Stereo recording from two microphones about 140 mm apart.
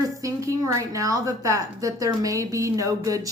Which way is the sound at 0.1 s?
20° right (ahead or behind).